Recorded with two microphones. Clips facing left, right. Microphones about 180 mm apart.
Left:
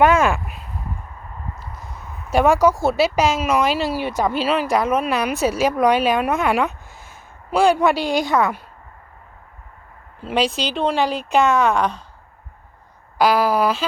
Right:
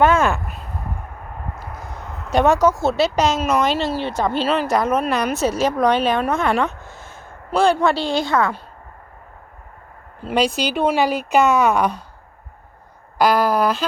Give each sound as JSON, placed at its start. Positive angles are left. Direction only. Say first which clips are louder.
{"t": 0.0, "sound": "speech", "louder": "left 1 dB", "side_deg": 10}
{"t": 0.4, "sound": "a sound", "louder": "right 2 dB", "side_deg": -40}
{"t": 1.6, "sound": "a sound", "louder": "right 4 dB", "side_deg": -80}
{"t": 2.3, "sound": "speech", "louder": "even", "side_deg": 10}
{"t": 10.2, "sound": "speech", "louder": "right 1 dB", "side_deg": 0}
{"t": 13.1, "sound": "speech", "louder": "even", "side_deg": 5}